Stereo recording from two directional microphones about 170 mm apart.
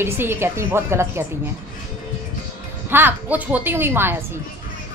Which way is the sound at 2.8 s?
10° right (ahead or behind).